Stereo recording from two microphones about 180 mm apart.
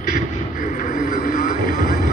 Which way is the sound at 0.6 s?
45° left (ahead or behind).